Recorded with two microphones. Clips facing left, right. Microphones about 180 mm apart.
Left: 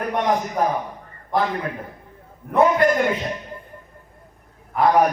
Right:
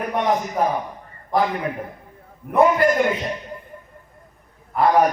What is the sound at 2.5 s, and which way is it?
Speech, centre (ahead or behind).